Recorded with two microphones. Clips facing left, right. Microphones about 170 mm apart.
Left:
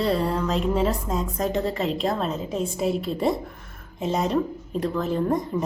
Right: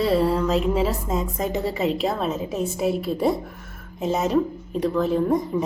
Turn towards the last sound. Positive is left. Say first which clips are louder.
# right 3 dB
turn(degrees=0)  # may be behind; listen again after turning